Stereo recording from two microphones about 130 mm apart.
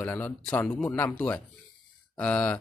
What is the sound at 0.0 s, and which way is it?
Speech, 15° left (ahead or behind).